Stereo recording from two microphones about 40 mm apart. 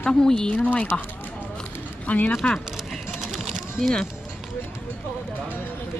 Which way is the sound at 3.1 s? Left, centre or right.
Centre.